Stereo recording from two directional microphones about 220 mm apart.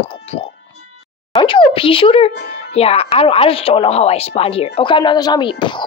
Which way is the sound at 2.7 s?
25° left (ahead or behind).